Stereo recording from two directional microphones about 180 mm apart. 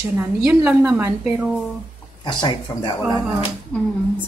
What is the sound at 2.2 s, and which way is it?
Speech, 25° left (ahead or behind).